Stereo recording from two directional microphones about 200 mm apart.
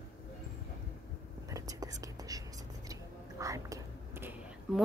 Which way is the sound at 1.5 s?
15° right (ahead or behind).